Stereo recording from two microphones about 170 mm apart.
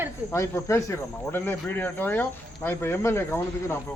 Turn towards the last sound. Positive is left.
turn(degrees=15)  # may be behind; listen again after turning